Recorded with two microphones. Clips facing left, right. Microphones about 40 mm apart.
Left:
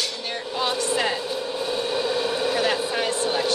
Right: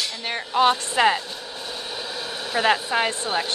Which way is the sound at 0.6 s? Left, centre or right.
Right.